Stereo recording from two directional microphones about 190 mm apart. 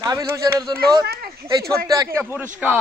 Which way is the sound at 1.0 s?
55° right (ahead or behind).